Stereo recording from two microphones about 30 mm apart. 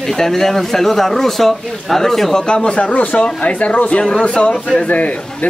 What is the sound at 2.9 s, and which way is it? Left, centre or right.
Speech, left.